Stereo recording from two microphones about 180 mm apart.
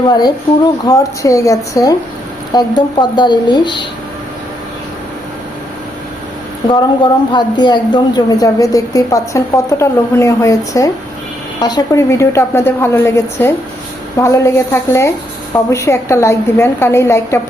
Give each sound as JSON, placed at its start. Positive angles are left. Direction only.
{"t": 0.1, "sound": "a woman's voice", "side_deg": 25}
{"t": 6.7, "sound": "a woman's voice", "side_deg": 25}